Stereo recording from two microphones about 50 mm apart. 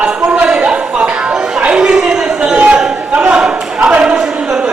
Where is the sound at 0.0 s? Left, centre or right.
Centre.